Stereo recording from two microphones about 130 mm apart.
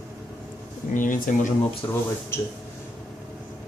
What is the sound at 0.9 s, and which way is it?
Speech, 90° left.